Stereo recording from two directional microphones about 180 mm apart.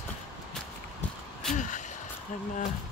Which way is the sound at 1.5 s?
45° left (ahead or behind).